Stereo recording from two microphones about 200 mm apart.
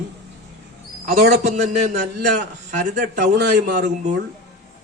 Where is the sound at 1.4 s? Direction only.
35° right (ahead or behind).